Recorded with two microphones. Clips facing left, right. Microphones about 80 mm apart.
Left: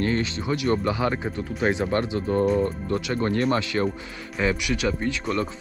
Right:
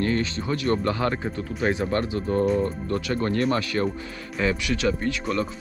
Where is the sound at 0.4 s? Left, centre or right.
Centre.